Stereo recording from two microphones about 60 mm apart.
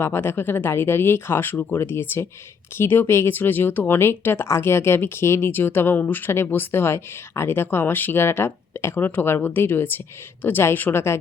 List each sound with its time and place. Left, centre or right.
0.0 s a woman's voice: left